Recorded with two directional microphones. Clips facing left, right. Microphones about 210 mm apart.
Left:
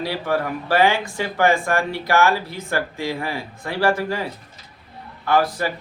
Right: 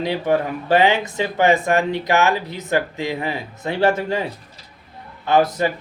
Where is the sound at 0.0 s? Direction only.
20° right (ahead or behind).